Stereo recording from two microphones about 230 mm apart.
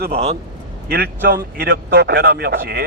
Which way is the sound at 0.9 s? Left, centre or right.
Right.